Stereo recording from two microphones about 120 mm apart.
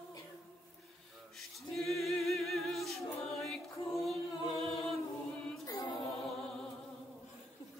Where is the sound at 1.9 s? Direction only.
Centre (ahead or behind).